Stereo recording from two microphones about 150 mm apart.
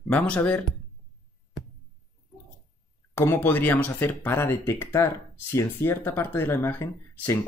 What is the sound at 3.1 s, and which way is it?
Speech, 15° left (ahead or behind).